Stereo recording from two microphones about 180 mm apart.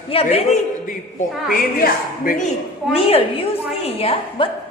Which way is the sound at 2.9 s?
30° left (ahead or behind).